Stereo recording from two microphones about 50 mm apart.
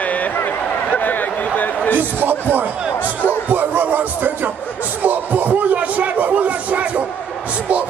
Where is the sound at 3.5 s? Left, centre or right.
Right.